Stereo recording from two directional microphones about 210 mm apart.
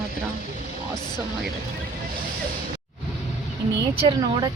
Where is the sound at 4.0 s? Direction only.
20° right (ahead or behind).